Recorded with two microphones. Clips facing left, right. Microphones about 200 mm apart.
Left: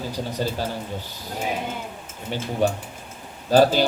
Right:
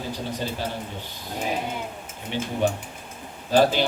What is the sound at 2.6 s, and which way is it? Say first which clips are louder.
A man's voice: left 4 dB; 40° left (ahead or behind).